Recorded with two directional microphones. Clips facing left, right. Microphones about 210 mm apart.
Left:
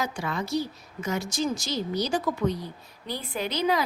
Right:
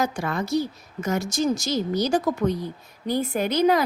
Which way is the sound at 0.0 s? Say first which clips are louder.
Right 5 dB; 50° right (ahead or behind).